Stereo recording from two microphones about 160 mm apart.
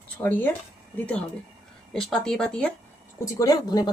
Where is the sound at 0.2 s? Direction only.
10° left (ahead or behind).